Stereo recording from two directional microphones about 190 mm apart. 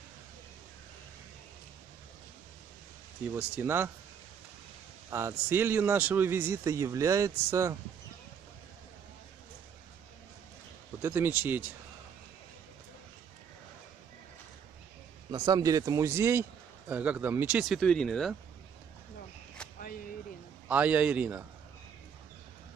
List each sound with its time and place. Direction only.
3.3 s a man's voice: 10° right (ahead or behind)
5.1 s a man's voice: 10° right (ahead or behind)
11.0 s a man's voice: 15° right (ahead or behind)
15.3 s a man's voice: 20° right (ahead or behind); by 18.3 s centre (ahead or behind)
20.6 s a man's voice: 10° right (ahead or behind)